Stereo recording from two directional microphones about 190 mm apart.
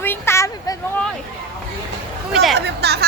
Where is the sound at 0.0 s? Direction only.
10° left (ahead or behind).